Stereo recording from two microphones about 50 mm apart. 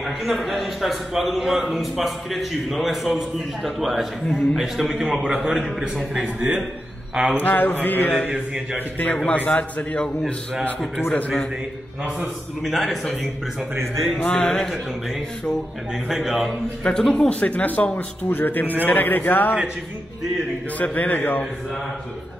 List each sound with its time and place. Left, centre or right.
0.0 s a man's voice: centre
6.1 s a man's voice: centre
7.3 s mantra: left
9.3 s a man's voice: left
11.1 s a man's voice: left
12.6 s a man's voice: centre
14.4 s a man's voice: centre
15.9 s a man's voice: centre
16.4 s a man's voice: centre
17.1 s a man's voice: left
18.3 s mantra: left
20.7 s mantra: left